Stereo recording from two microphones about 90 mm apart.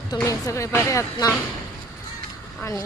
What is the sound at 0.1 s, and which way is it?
Speech, 40° left (ahead or behind).